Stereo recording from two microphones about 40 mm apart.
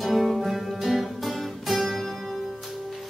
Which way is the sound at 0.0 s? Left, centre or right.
Centre.